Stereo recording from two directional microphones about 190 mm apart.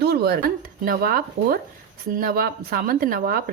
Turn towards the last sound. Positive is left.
turn(degrees=-50)  # may be behind; listen again after turning